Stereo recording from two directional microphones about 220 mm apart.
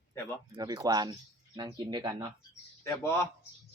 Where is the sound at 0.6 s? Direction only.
15° right (ahead or behind).